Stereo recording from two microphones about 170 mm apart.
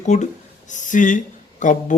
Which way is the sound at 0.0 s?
45° left (ahead or behind).